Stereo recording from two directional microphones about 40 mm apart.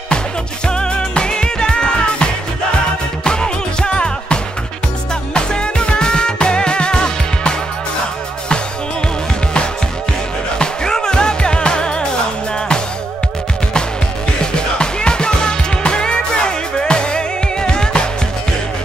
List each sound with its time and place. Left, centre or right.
0.7 s music: left
3.3 s music: left
10.6 s music: centre
14.4 s music: left